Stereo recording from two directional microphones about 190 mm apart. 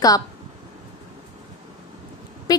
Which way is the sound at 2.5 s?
20° left (ahead or behind).